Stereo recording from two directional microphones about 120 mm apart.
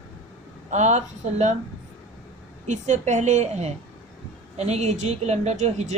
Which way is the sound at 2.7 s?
80° right.